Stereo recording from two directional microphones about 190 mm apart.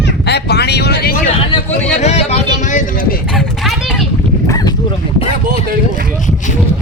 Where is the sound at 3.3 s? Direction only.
Centre (ahead or behind).